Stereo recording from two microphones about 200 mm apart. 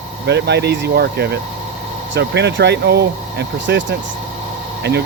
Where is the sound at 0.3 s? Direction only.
60° right (ahead or behind).